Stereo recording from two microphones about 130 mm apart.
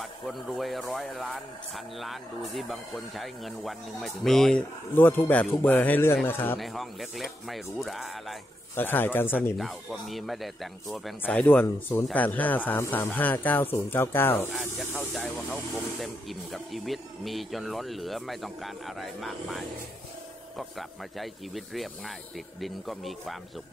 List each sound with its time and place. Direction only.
0.0 s speech: centre (ahead or behind)
4.9 s speech: 15° left (ahead or behind)
6.6 s speech: centre (ahead or behind)
8.7 s speech: 15° left (ahead or behind)
9.6 s speech: centre (ahead or behind)
11.2 s speech: 10° left (ahead or behind)
11.6 s speech: 20° left (ahead or behind)
15.0 s speech: centre (ahead or behind)